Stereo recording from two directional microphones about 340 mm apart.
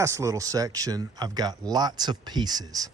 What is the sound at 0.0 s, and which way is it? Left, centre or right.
Speech, centre.